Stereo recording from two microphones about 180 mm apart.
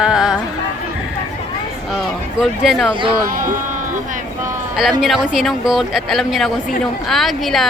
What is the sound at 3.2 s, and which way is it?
Speech, 50° right (ahead or behind).